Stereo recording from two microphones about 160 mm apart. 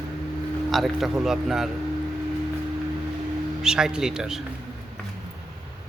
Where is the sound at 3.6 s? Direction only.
5° right (ahead or behind).